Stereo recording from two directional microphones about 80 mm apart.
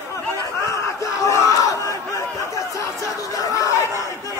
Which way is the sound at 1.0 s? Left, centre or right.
Left.